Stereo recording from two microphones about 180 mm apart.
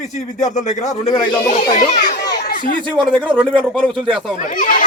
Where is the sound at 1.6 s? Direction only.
45° left (ahead or behind).